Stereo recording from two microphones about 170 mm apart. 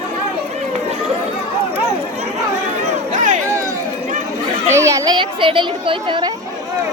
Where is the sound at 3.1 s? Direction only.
45° right (ahead or behind).